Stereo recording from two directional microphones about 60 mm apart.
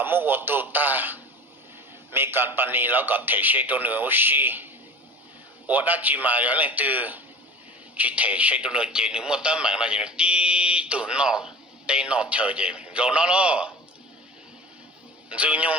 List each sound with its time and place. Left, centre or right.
0.0 s a man's voice: right; by 13.7 s centre
15.3 s a man's voice: right